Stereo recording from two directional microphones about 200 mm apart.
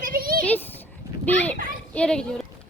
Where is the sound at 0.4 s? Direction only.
10° left (ahead or behind).